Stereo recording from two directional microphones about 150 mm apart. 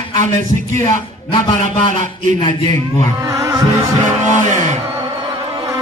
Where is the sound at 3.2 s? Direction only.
20° right (ahead or behind).